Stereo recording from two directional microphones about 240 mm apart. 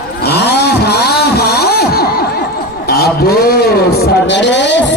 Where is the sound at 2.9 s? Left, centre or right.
Left.